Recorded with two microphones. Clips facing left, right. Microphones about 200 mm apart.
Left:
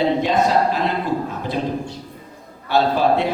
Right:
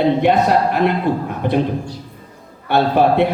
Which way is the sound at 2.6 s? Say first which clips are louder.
Right 3 dB; 60° right (ahead or behind).